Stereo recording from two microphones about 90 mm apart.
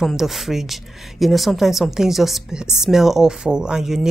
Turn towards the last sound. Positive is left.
turn(degrees=-5)  # may be behind; listen again after turning